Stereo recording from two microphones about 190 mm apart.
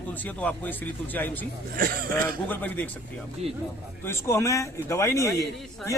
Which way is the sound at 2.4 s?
10° left (ahead or behind).